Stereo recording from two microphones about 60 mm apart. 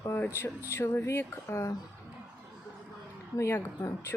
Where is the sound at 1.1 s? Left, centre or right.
Left.